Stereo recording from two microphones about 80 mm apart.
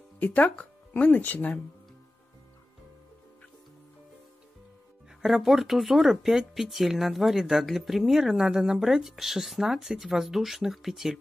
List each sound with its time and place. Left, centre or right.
0.2 s speech: left
5.2 s speech: centre